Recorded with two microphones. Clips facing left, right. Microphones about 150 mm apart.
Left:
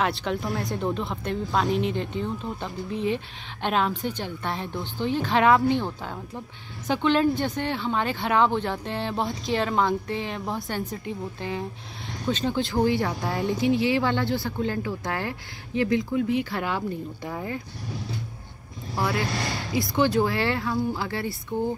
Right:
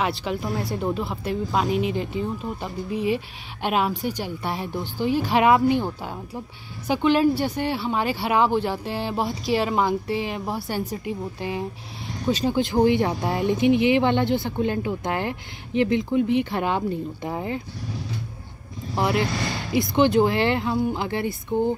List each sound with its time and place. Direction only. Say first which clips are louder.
0.0 s speech: right 1 dB; 5° right (ahead or behind); by 17.6 s 20° right (ahead or behind)
18.9 s speech: right 4 dB; 20° right (ahead or behind)